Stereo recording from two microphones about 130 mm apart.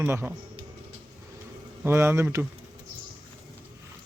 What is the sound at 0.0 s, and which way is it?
Speech, 15° right (ahead or behind).